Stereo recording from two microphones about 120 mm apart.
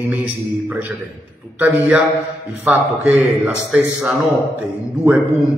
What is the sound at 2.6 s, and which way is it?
A man's voice, 15° right (ahead or behind).